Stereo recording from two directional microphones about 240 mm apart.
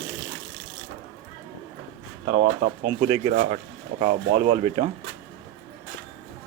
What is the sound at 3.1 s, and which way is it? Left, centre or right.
Speech, right.